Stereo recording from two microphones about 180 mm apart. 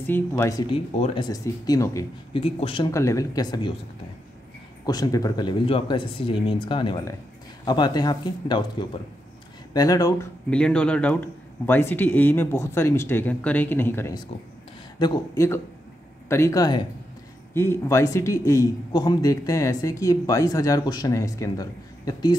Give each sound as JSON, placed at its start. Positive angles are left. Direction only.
{"t": 0.0, "sound": "speech", "side_deg": 10}
{"t": 0.9, "sound": "speech", "side_deg": 35}
{"t": 1.3, "sound": "a man's voice", "side_deg": 20}
{"t": 2.3, "sound": "speech", "side_deg": 30}
{"t": 2.9, "sound": "speech", "side_deg": 15}
{"t": 4.8, "sound": "a man's voice", "side_deg": 20}
{"t": 10.5, "sound": "a man's voice", "side_deg": 5}